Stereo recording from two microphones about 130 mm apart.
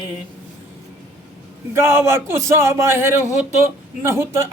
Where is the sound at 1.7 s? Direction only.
20° right (ahead or behind).